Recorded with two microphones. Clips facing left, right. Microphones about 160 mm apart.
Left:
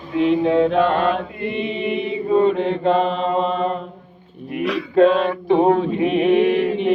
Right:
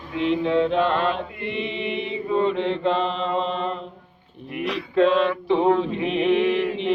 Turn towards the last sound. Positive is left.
turn(degrees=50)  # may be behind; listen again after turning